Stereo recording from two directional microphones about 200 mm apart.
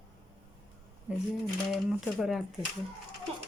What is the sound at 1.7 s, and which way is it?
Speech, centre (ahead or behind).